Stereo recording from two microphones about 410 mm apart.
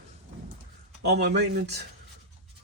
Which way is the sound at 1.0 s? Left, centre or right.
Right.